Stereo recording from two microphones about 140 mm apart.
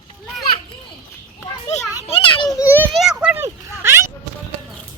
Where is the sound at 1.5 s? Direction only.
25° left (ahead or behind).